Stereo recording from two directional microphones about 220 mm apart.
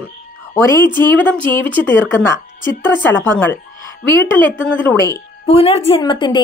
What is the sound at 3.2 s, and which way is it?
A woman's voice, 10° left (ahead or behind).